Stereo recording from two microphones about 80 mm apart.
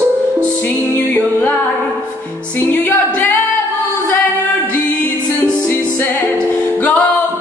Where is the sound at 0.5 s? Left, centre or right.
Left.